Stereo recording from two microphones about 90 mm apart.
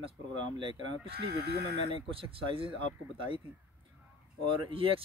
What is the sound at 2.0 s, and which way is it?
Speech, 90° right.